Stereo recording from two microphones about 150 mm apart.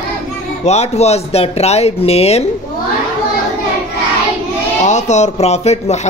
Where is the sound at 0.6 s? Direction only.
45° left (ahead or behind).